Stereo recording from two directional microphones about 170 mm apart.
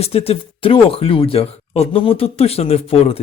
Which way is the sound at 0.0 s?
35° left (ahead or behind).